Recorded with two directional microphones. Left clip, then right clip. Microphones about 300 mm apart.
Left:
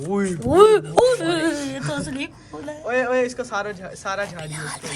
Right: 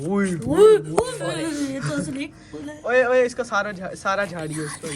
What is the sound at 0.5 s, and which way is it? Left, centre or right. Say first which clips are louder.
Speech: left 1 dB; left.